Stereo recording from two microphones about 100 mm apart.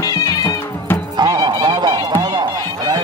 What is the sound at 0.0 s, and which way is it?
Music, 35° left (ahead or behind).